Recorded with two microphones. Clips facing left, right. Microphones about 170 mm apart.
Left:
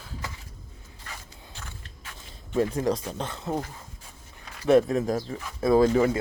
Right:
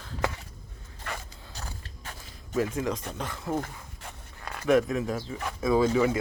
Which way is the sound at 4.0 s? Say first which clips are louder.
Right 6 dB; 70° right (ahead or behind).